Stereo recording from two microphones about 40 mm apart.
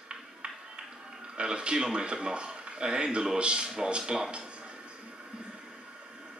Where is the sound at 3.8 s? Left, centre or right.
Right.